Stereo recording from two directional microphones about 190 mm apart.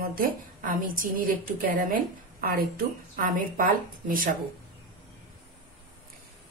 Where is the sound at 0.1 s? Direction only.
45° right (ahead or behind).